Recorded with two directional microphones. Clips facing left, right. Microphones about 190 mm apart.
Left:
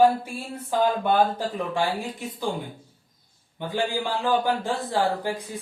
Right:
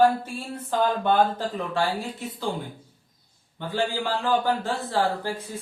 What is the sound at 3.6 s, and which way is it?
Speech, 15° left (ahead or behind).